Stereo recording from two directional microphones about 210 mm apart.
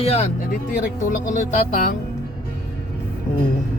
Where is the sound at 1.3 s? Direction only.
35° left (ahead or behind).